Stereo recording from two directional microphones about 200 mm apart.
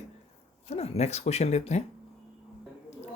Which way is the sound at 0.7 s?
30° left (ahead or behind).